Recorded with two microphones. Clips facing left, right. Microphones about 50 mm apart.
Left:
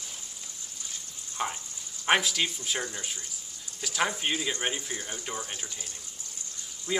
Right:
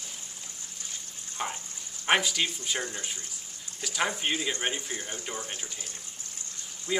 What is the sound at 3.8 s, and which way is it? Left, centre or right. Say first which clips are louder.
Speech: even; centre.